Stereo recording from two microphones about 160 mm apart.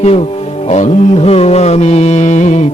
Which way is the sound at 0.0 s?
40° left (ahead or behind).